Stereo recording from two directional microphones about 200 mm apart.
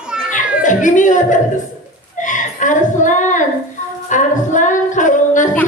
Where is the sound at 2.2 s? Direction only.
40° left (ahead or behind).